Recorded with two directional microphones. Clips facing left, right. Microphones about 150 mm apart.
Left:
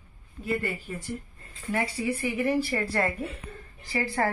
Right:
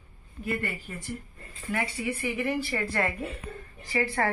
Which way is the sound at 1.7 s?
35° left (ahead or behind).